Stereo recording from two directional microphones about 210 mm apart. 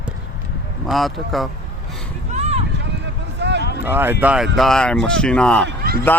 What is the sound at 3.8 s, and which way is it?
Speech, 10° right (ahead or behind).